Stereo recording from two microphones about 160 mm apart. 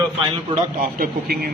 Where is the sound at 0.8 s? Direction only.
65° right (ahead or behind).